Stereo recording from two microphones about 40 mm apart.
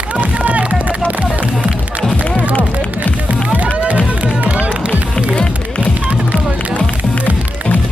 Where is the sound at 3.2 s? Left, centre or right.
Right.